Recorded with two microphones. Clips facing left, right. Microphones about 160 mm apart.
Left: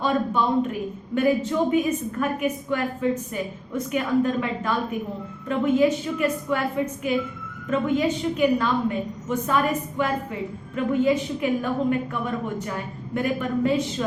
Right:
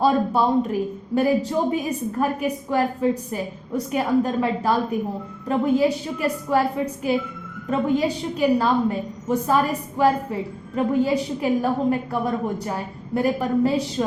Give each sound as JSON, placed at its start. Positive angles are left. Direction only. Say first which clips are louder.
{"t": 0.0, "sound": "a woman's voice", "louder": "right 4 dB", "side_deg": -35}
{"t": 10.8, "sound": "a woman's voice", "louder": "right 1 dB", "side_deg": -35}